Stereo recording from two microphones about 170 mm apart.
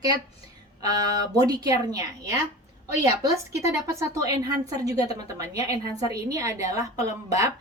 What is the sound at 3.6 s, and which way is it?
A woman's voice, 15° right (ahead or behind).